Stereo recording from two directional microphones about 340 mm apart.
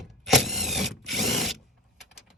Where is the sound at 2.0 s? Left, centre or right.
Centre.